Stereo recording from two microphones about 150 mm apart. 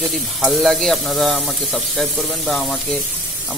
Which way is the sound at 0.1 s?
Centre (ahead or behind).